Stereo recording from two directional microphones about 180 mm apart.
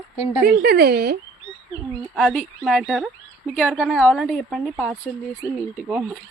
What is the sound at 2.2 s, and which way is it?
A woman's voice, 5° left (ahead or behind).